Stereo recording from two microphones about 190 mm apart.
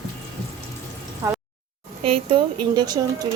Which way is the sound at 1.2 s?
15° right (ahead or behind).